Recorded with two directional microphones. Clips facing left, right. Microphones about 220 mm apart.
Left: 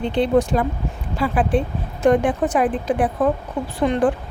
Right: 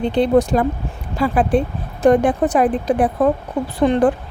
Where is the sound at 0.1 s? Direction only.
40° right (ahead or behind).